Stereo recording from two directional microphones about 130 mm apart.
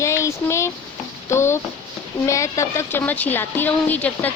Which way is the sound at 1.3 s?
20° left (ahead or behind).